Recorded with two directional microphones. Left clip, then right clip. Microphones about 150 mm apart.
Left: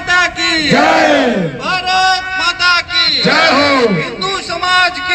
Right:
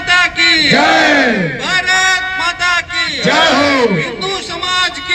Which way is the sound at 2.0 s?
35° right (ahead or behind).